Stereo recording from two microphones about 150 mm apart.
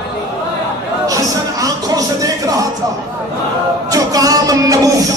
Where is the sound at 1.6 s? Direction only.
25° right (ahead or behind).